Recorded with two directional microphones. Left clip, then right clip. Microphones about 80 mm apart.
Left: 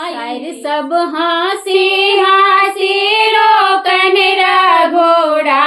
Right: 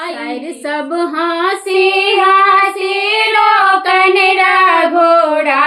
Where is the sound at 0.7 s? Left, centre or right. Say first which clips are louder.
Left 3 dB; right.